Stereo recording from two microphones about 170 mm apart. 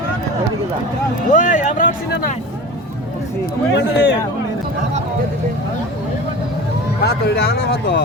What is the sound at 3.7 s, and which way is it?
Speech, 90° left.